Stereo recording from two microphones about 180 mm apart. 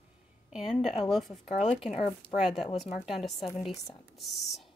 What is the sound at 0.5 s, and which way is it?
Speech, centre (ahead or behind).